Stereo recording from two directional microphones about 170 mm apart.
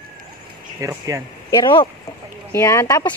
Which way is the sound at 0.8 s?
20° right (ahead or behind).